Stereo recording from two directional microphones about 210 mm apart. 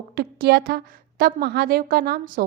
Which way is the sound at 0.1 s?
50° right (ahead or behind).